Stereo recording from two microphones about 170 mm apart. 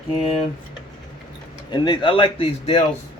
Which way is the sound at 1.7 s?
25° left (ahead or behind).